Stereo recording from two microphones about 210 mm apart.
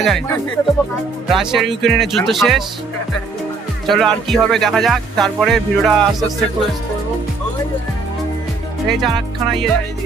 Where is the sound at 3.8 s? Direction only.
Centre (ahead or behind).